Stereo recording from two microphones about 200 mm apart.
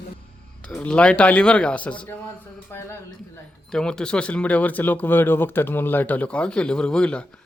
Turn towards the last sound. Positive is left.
turn(degrees=5)  # may be behind; listen again after turning